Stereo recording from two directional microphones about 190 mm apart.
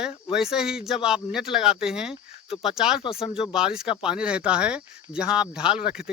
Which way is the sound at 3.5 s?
5° right (ahead or behind).